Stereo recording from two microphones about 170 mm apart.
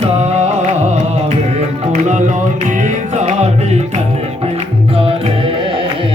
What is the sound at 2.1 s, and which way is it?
Music, 45° right (ahead or behind).